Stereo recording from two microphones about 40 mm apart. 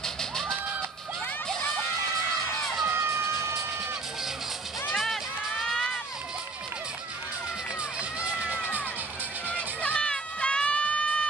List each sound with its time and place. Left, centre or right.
0.0 s a sound: centre
2.9 s crowd: right
4.9 s run: centre
8.0 s crowd: right
9.5 s music: left
9.9 s run: left